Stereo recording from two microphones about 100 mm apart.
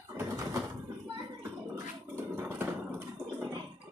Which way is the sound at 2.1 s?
20° right (ahead or behind).